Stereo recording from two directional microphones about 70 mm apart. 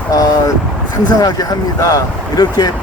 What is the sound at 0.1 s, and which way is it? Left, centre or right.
Vehicle, left.